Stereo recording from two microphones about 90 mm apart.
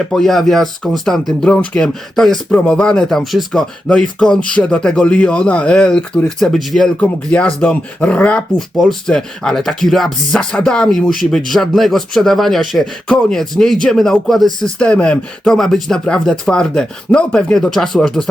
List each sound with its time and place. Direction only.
0.1 s speech: 5° left (ahead or behind)
6.9 s speech: 15° left (ahead or behind)